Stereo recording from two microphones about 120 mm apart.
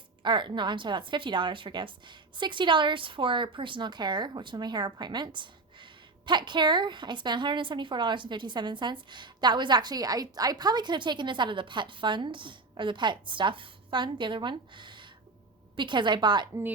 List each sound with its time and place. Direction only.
0.2 s a woman's voice: 40° right (ahead or behind)